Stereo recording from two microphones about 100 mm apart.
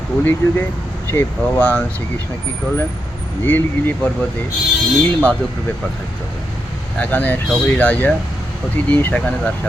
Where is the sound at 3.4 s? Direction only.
20° left (ahead or behind).